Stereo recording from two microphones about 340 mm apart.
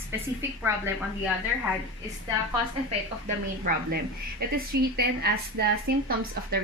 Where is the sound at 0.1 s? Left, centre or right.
Centre.